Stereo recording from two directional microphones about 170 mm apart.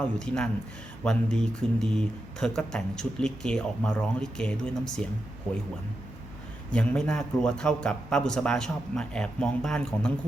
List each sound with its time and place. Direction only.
0.0 s speech: 5° left (ahead or behind)
6.7 s speech: 5° left (ahead or behind)